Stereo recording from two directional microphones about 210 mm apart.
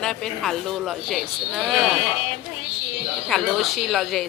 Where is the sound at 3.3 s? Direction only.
Centre (ahead or behind).